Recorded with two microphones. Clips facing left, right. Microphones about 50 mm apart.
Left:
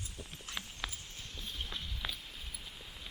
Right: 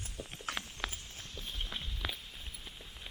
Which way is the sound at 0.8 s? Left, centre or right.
Centre.